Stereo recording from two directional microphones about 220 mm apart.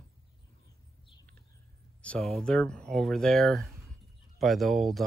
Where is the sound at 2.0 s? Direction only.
5° left (ahead or behind).